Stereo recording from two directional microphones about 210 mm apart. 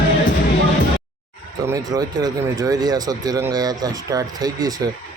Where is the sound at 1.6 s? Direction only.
15° right (ahead or behind).